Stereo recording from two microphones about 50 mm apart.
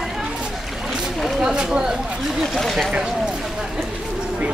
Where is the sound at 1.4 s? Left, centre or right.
Centre.